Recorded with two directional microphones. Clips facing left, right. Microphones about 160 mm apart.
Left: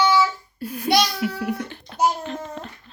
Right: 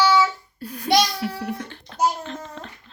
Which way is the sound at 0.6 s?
5° left (ahead or behind).